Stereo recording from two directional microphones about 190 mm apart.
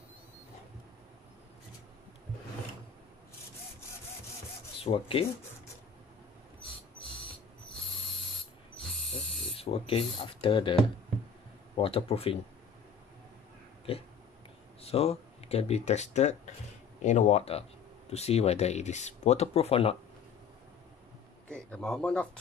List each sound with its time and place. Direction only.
4.7 s speech: 30° left (ahead or behind)
8.8 s owl: centre (ahead or behind)
9.6 s speech: 30° left (ahead or behind)
14.8 s speech: 30° left (ahead or behind)
21.5 s speech: 5° left (ahead or behind)